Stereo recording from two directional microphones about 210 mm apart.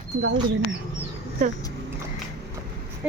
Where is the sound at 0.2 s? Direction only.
55° right (ahead or behind).